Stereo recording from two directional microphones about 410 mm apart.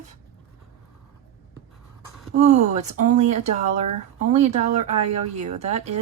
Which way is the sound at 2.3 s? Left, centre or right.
Centre.